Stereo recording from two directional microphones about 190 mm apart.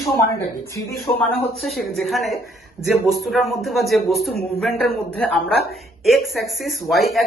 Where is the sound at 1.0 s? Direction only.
Centre (ahead or behind).